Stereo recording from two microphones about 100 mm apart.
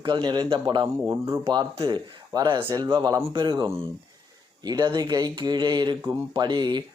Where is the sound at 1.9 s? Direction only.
45° right (ahead or behind).